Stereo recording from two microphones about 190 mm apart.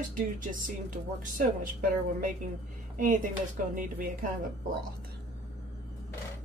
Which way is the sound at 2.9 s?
45° right (ahead or behind).